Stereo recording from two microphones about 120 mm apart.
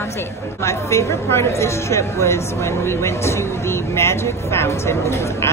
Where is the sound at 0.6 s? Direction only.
25° left (ahead or behind).